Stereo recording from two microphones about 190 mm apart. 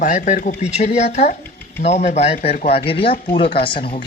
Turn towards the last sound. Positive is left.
turn(degrees=25)  # may be behind; listen again after turning